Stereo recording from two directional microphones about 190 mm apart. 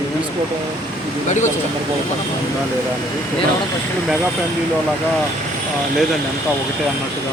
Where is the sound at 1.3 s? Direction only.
40° left (ahead or behind).